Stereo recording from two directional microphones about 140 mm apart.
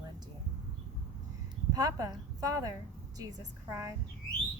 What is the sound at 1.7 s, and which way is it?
A woman's voice, 25° right (ahead or behind).